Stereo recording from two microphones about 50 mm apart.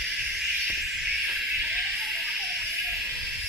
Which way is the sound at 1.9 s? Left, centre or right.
Centre.